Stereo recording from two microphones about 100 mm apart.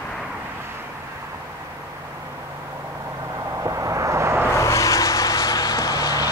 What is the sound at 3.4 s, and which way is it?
Vehicle, 30° right (ahead or behind).